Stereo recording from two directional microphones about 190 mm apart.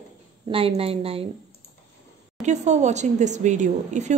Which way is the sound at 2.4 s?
40° right (ahead or behind).